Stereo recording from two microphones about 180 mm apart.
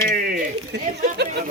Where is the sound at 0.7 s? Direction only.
70° right (ahead or behind).